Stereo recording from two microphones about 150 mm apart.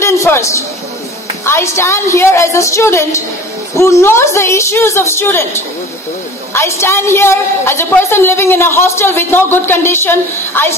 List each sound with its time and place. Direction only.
0.0 s a sound: 20° left (ahead or behind)
1.4 s a woman's voice: 15° left (ahead or behind)
6.5 s a woman's voice: 15° left (ahead or behind)